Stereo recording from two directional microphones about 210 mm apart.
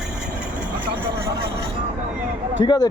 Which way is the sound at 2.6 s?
20° left (ahead or behind).